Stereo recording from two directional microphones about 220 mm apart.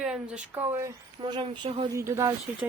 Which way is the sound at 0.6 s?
15° right (ahead or behind).